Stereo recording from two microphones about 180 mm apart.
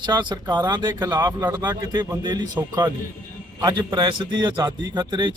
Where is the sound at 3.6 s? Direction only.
25° right (ahead or behind).